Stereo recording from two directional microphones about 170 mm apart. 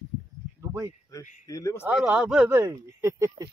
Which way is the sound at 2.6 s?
15° right (ahead or behind).